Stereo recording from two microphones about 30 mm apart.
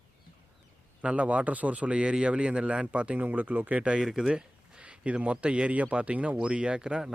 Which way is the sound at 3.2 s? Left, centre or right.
Right.